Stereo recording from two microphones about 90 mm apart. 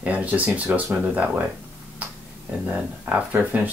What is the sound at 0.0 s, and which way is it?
Speech, 15° right (ahead or behind).